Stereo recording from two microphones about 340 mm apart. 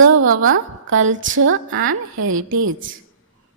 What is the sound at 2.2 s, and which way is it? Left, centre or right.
Speech, right.